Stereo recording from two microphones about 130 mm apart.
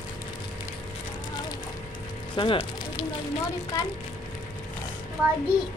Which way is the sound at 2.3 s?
40° left (ahead or behind).